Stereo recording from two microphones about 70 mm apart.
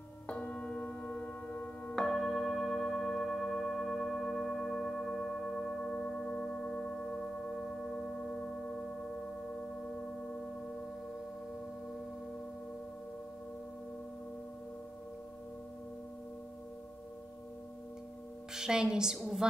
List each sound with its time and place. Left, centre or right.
0.3 s singing bowl: centre
2.0 s singing bowl: centre
18.5 s a woman's voice: centre